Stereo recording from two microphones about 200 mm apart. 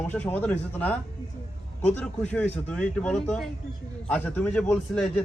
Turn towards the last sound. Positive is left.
turn(degrees=5)  # may be behind; listen again after turning